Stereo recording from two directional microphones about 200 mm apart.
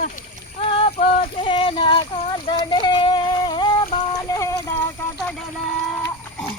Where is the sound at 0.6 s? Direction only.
25° left (ahead or behind).